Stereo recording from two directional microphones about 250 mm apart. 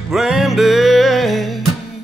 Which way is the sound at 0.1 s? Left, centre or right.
Centre.